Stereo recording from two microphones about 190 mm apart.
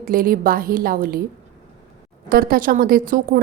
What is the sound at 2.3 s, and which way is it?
A woman's voice, 50° right (ahead or behind).